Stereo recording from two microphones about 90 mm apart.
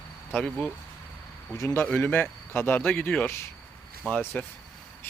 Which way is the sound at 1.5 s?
30° left (ahead or behind).